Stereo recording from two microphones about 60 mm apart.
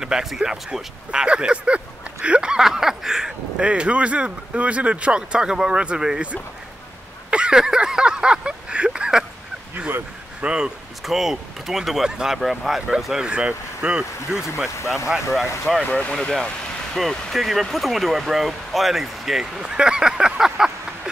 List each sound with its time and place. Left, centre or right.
0.0 s speech: centre
7.2 s a sound: centre
10.4 s speech: centre
11.1 s speech: centre
14.3 s speech: centre
14.8 s speech: left
15.9 s speech: left
16.2 s speech: centre